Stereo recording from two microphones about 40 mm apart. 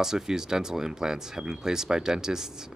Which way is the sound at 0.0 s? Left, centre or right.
Centre.